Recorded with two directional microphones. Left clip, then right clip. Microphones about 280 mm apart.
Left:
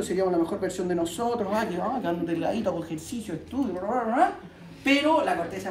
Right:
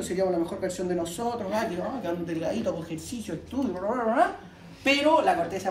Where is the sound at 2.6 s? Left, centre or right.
Centre.